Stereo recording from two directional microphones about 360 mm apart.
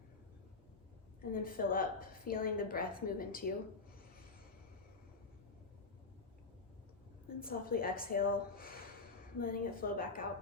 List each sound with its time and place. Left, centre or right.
1.3 s a woman's voice: left
7.3 s a woman's voice: left